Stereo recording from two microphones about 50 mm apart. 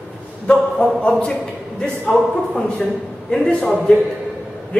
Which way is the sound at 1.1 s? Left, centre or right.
Centre.